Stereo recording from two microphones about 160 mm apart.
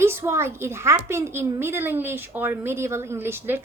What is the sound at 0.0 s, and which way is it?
A child's voice, 15° right (ahead or behind).